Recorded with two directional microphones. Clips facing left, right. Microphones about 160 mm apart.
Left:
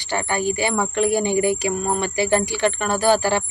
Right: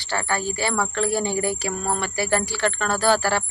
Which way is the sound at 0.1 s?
15° left (ahead or behind).